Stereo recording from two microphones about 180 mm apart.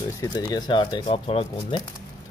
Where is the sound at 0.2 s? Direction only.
20° left (ahead or behind).